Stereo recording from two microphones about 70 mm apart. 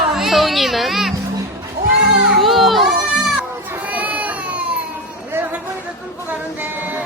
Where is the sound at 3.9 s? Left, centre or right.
Right.